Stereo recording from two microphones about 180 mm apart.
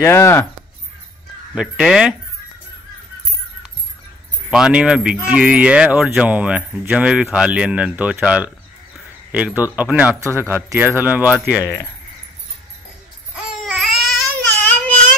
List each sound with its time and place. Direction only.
0.0 s speech: 15° left (ahead or behind)
1.5 s speech: 5° right (ahead or behind)
4.5 s speech: 5° right (ahead or behind)
9.6 s speech: 10° right (ahead or behind)
11.6 s speech: 15° left (ahead or behind)
13.4 s babbling: centre (ahead or behind)
14.5 s baby cry: 10° left (ahead or behind)